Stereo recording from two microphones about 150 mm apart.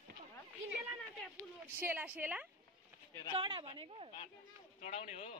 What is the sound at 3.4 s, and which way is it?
Speech, 35° right (ahead or behind).